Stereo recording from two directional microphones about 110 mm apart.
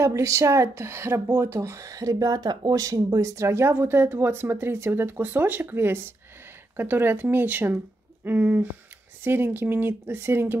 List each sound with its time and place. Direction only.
0.0 s speech: 30° right (ahead or behind)